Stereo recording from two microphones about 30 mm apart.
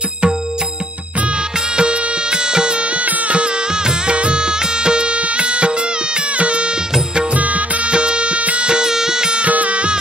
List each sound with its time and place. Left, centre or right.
1.7 s music: right
3.8 s music: right
7.3 s music: right
7.9 s music: right
8.6 s music: right
9.4 s music: right